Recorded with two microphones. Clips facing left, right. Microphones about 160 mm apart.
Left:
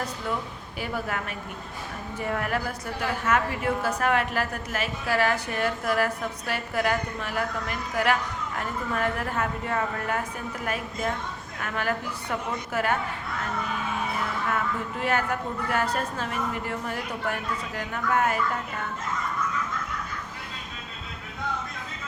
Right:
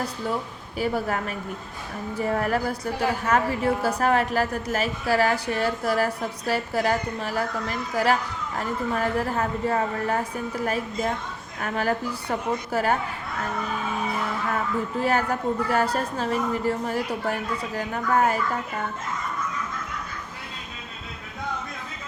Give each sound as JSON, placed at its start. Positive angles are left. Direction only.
{"t": 0.8, "sound": "a woman's voice", "side_deg": -40}
{"t": 11.6, "sound": "a woman's voice", "side_deg": -35}
{"t": 15.0, "sound": "a woman's voice", "side_deg": -35}